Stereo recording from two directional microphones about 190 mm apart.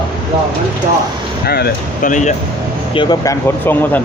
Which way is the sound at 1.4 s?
55° left (ahead or behind).